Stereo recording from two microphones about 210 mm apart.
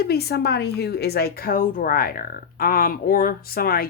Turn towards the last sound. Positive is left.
turn(degrees=45)  # may be behind; listen again after turning